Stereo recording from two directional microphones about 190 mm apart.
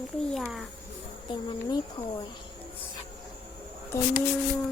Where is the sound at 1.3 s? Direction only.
25° left (ahead or behind).